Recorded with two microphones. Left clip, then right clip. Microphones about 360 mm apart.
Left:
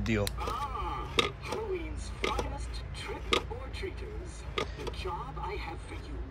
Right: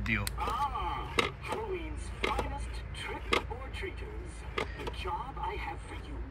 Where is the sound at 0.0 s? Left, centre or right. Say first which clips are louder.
Even; centre.